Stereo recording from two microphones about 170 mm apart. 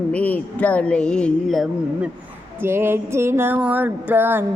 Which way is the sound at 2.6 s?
15° right (ahead or behind).